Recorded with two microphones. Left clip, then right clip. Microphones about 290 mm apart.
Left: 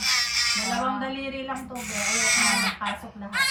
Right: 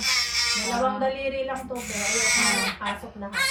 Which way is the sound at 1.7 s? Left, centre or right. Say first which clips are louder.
Left 1 dB; left.